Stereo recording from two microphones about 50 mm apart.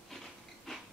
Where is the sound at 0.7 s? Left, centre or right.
Centre.